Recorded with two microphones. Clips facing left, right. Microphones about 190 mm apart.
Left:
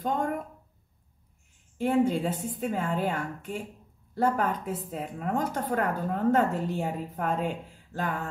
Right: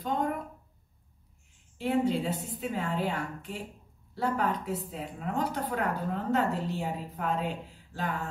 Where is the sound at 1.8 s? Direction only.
50° left (ahead or behind).